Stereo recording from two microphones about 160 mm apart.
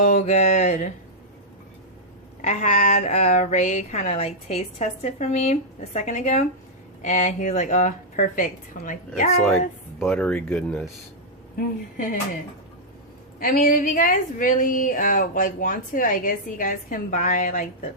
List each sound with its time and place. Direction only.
0.0 s speech: 45° left (ahead or behind)
2.4 s speech: 45° left (ahead or behind)
10.0 s speech: 5° left (ahead or behind)
13.4 s a woman's voice: 65° left (ahead or behind)